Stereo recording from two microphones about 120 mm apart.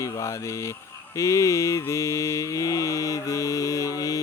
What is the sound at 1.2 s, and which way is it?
Mantra, 25° left (ahead or behind).